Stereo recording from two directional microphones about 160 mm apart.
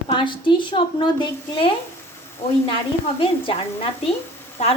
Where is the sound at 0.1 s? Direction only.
30° left (ahead or behind).